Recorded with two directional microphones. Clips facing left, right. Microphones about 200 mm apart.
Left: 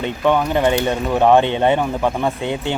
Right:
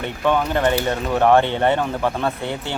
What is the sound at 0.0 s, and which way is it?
Speech, 15° left (ahead or behind).